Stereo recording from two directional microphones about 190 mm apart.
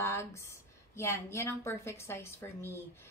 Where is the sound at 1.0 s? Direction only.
15° left (ahead or behind).